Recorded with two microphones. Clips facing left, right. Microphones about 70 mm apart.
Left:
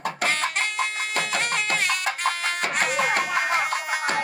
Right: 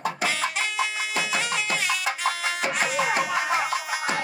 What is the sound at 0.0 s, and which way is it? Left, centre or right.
Music, left.